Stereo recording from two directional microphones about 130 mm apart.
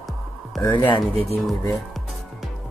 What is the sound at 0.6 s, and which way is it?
Speech, 35° left (ahead or behind).